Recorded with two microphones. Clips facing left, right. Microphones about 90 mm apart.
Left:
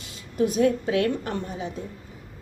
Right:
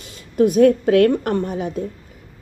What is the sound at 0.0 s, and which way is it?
A woman's voice, 50° right (ahead or behind).